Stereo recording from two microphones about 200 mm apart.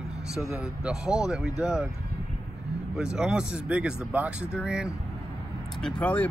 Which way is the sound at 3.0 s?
5° right (ahead or behind).